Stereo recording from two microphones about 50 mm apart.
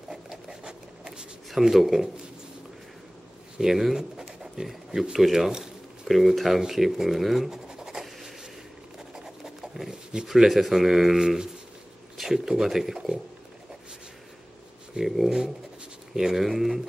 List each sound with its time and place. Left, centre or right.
0.1 s a sound: centre
1.5 s speech: centre
3.5 s pigeon: centre
5.1 s speech: centre
6.6 s scratch: centre
9.1 s a sound: centre
10.2 s speech: centre
15.0 s speech: centre